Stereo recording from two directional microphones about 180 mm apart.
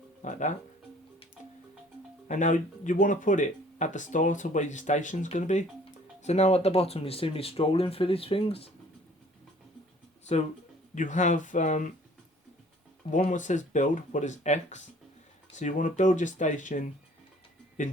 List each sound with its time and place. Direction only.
0.3 s speech: 45° left (ahead or behind)
2.2 s speech: 45° left (ahead or behind)
10.9 s speech: 45° left (ahead or behind)
13.1 s speech: 45° left (ahead or behind)